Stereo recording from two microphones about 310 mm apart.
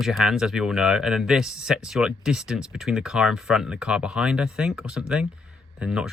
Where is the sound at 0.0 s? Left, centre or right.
Centre.